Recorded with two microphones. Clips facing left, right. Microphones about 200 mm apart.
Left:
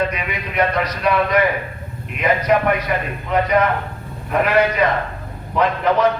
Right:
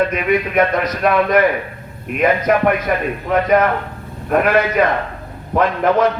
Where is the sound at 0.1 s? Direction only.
50° right (ahead or behind).